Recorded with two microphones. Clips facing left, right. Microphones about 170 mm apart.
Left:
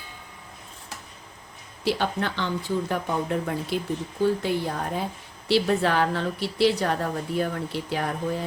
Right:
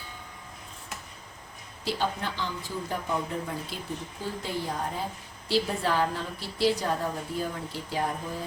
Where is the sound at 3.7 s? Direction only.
65° left (ahead or behind).